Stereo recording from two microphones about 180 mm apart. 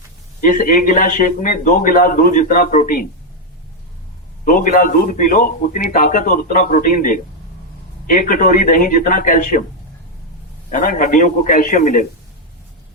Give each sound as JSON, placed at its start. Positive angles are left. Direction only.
{"t": 0.4, "sound": "a man's voice", "side_deg": 50}
{"t": 4.4, "sound": "a man's voice", "side_deg": 50}
{"t": 10.7, "sound": "a man's voice", "side_deg": 50}